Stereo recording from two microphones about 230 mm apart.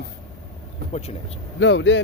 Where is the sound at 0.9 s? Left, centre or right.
Left.